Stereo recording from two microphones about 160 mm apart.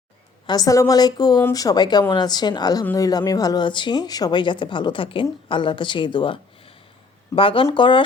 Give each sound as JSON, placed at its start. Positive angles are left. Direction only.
{"t": 0.4, "sound": "speech", "side_deg": 25}